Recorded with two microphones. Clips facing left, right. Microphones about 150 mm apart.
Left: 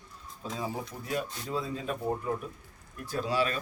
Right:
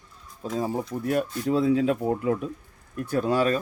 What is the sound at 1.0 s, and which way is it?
Speech, 60° right (ahead or behind).